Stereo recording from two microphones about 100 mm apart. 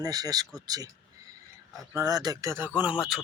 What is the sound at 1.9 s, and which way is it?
Speech, 40° right (ahead or behind).